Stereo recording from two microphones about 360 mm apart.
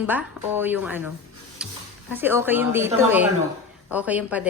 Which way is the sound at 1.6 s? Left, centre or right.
Centre.